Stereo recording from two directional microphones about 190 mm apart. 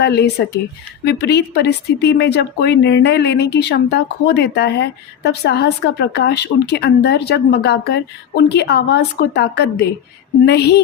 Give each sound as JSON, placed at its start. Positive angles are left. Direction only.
{"t": 0.0, "sound": "a woman's voice", "side_deg": 60}